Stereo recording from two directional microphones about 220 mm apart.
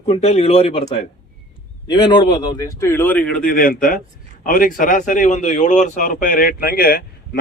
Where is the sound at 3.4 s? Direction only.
40° left (ahead or behind).